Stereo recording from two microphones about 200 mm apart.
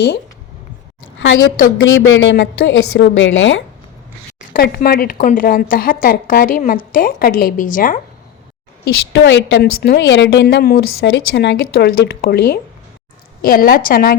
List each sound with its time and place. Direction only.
1.5 s speech: 45° left (ahead or behind)
2.0 s a woman's voice: 75° left (ahead or behind)
4.4 s speech: 50° left (ahead or behind)
9.1 s a woman's voice: 60° left (ahead or behind); by 14.2 s 45° left (ahead or behind)